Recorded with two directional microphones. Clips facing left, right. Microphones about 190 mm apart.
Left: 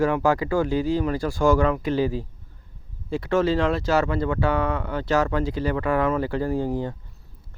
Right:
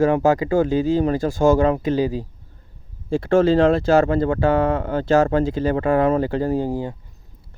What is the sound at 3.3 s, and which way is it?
Speech, 30° right (ahead or behind).